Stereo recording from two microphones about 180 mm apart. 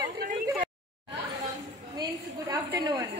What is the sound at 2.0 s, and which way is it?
A woman's voice, 20° right (ahead or behind).